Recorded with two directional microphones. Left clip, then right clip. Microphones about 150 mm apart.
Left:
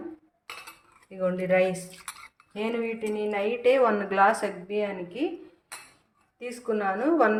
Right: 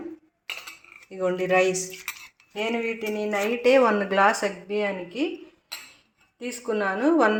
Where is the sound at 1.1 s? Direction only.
25° right (ahead or behind).